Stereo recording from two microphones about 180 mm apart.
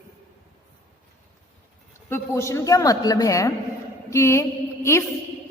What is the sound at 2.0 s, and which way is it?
A woman's voice, 15° left (ahead or behind).